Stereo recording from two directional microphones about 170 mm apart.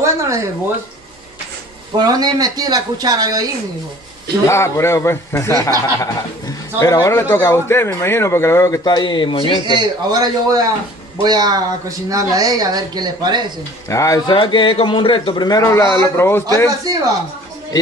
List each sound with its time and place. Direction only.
0.0 s a sound: 15° right (ahead or behind)
2.0 s speech: 25° right (ahead or behind)
4.5 s speech: 15° left (ahead or behind)
9.7 s speech: 25° right (ahead or behind)
13.8 s a man's voice: 20° left (ahead or behind)